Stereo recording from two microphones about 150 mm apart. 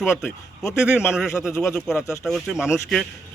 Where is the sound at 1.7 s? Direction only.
Centre (ahead or behind).